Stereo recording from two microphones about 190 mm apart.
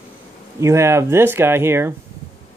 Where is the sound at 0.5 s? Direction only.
15° right (ahead or behind).